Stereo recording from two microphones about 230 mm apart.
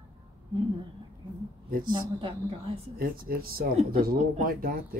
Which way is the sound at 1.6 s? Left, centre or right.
Right.